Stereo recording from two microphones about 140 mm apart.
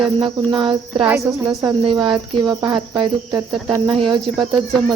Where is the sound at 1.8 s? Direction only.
30° right (ahead or behind).